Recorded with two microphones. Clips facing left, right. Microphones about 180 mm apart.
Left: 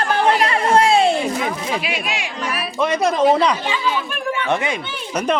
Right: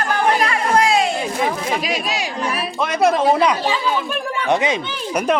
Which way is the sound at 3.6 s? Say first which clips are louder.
Right 2 dB; 40° right (ahead or behind).